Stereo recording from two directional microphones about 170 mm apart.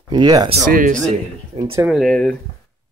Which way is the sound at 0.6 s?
50° right (ahead or behind).